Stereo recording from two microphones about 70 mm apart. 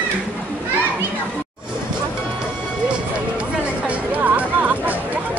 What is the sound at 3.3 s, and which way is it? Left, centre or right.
Music, centre.